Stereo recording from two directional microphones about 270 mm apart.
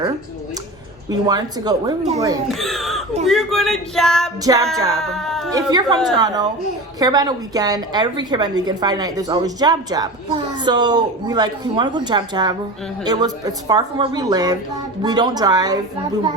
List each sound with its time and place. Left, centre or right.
1.3 s a woman's voice: centre
2.5 s speech: centre
4.4 s a woman's voice: centre
4.9 s speech: centre
5.5 s a woman's voice: centre